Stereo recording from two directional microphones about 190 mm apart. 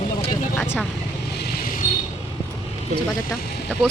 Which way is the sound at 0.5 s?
10° left (ahead or behind).